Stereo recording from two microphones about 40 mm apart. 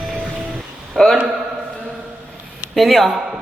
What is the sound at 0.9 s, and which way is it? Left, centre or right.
Music, centre.